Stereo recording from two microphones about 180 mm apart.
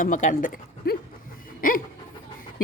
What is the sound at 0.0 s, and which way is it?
Speech, 45° left (ahead or behind).